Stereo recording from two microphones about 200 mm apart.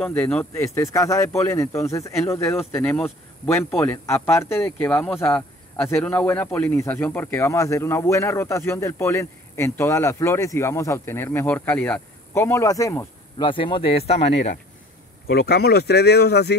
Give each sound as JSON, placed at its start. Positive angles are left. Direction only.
{"t": 0.0, "sound": "speech", "side_deg": 5}
{"t": 15.2, "sound": "speech", "side_deg": 50}